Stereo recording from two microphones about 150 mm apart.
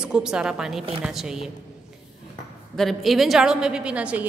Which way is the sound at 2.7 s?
Centre (ahead or behind).